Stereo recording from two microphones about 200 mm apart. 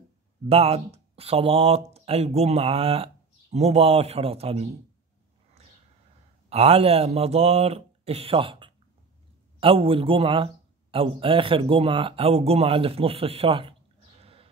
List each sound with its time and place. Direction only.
0.5 s speech: 30° right (ahead or behind)
6.5 s speech: 30° right (ahead or behind)
14.2 s sheep: 30° right (ahead or behind)